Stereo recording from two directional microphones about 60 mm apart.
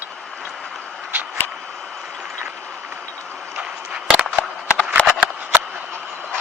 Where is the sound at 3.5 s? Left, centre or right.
Centre.